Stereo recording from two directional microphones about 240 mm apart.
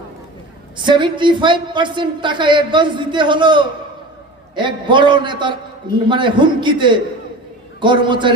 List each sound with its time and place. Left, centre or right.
0.9 s a woman's voice: centre